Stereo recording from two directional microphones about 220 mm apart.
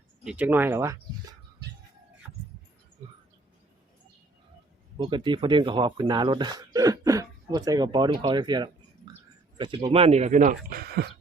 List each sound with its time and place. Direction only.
0.3 s speech: 5° right (ahead or behind)
4.9 s speech: 20° right (ahead or behind); by 11.1 s 45° right (ahead or behind)